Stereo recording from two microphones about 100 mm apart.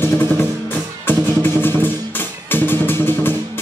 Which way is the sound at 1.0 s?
20° left (ahead or behind).